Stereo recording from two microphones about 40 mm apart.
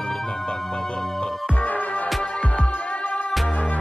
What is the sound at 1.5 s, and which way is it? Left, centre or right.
Music, left.